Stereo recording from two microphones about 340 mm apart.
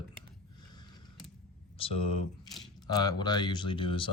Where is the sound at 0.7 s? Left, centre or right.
Centre.